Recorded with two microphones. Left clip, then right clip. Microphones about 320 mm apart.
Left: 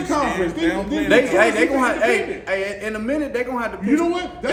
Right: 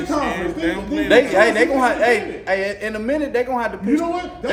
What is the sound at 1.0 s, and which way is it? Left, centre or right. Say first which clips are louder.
A man's voice: right 2 dB; right.